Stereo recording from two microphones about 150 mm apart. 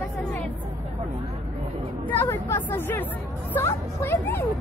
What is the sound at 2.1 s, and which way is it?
Speech, 15° left (ahead or behind).